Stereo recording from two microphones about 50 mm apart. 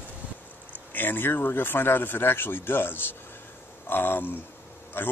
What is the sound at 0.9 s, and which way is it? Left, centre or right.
Speech, left.